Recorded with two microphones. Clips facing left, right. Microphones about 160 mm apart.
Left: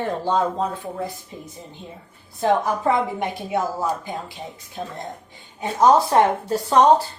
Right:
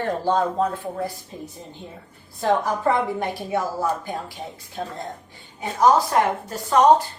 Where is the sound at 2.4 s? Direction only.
20° left (ahead or behind).